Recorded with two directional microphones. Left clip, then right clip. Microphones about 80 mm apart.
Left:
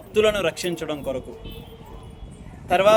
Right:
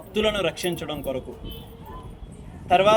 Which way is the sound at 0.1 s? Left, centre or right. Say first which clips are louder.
Left 4 dB; left.